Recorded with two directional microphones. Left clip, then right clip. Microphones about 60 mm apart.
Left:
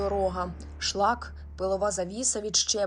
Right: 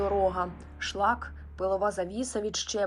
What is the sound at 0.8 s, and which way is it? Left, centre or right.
Speech, left.